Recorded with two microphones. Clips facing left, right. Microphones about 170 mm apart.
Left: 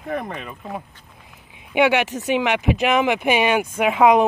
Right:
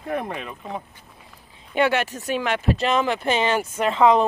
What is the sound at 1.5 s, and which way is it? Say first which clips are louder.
Speech: left 3 dB; 15° left (ahead or behind).